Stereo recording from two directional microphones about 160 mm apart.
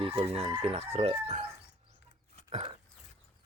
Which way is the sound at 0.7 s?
40° right (ahead or behind).